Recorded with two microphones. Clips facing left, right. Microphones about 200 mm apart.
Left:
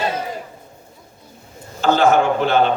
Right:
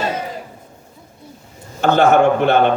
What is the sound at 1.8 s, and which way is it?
Speech, 60° right (ahead or behind).